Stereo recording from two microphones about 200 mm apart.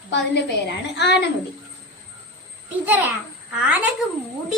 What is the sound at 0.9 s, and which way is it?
Speech, 55° left (ahead or behind).